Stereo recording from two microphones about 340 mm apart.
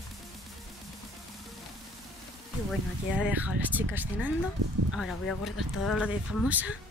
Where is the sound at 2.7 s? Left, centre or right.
Centre.